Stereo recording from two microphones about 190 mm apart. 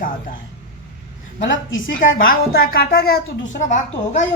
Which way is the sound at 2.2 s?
50° left (ahead or behind).